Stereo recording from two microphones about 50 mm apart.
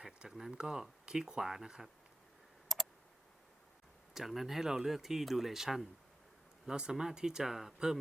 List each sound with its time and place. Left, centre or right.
0.0 s speech: centre
2.7 s clicking: centre
4.1 s speech: centre
6.7 s speech: centre